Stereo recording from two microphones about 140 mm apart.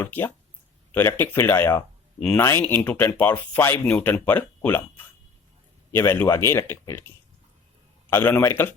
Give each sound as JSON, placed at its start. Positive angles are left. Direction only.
{"t": 0.0, "sound": "speech", "side_deg": 15}
{"t": 2.1, "sound": "speech", "side_deg": 5}
{"t": 2.4, "sound": "speech", "side_deg": 20}
{"t": 8.1, "sound": "speech", "side_deg": 15}